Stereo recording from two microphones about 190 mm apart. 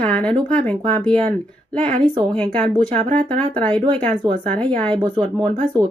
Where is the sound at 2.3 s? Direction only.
5° left (ahead or behind).